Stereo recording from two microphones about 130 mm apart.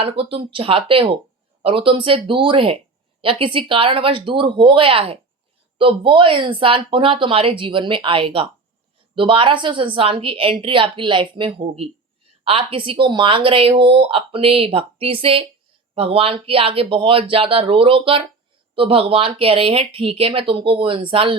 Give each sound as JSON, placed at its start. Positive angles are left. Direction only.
{"t": 0.0, "sound": "speech", "side_deg": -45}